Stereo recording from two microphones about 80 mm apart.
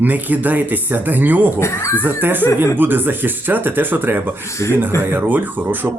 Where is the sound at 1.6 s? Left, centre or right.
Left.